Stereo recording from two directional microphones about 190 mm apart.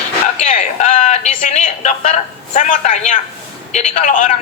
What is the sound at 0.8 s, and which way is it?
A man's voice, 40° left (ahead or behind).